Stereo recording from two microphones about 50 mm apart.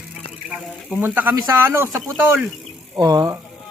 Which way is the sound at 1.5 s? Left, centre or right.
Right.